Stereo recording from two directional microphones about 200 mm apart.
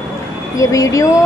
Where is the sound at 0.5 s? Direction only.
15° left (ahead or behind).